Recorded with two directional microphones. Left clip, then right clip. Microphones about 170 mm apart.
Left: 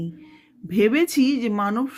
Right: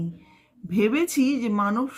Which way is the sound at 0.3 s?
30° left (ahead or behind).